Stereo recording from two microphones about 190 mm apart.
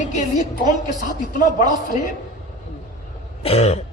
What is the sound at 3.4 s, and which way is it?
Speech, 35° left (ahead or behind).